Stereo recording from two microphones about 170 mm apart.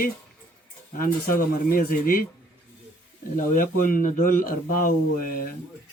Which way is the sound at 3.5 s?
55° left (ahead or behind).